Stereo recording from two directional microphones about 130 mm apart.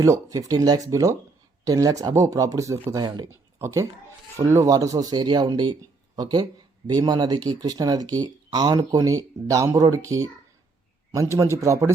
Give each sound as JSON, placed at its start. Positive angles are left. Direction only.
{"t": 0.0, "sound": "speech", "side_deg": -25}